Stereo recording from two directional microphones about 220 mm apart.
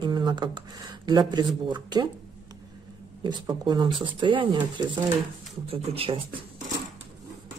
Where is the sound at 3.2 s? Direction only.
20° right (ahead or behind).